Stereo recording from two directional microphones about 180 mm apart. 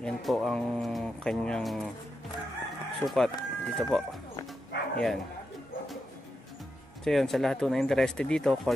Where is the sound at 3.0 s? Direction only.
Centre (ahead or behind).